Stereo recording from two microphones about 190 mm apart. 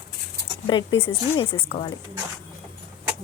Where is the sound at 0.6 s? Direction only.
25° left (ahead or behind).